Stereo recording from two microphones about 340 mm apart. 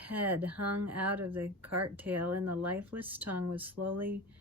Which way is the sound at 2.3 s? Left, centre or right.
Right.